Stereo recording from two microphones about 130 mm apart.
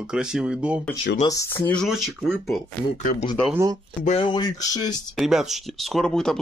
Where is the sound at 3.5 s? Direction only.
25° right (ahead or behind).